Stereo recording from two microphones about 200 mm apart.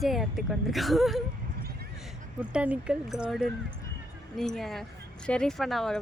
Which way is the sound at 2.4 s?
5° right (ahead or behind).